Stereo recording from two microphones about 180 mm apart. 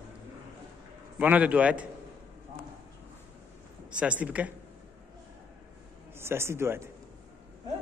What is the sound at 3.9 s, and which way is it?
Speech, 5° right (ahead or behind).